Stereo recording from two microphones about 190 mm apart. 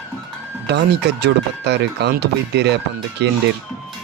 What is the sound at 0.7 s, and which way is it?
Speech, 60° right (ahead or behind).